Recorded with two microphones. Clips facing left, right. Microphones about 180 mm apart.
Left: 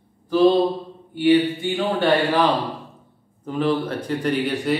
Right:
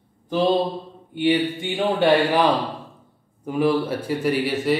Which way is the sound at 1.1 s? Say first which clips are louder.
Left 3 dB; 20° right (ahead or behind).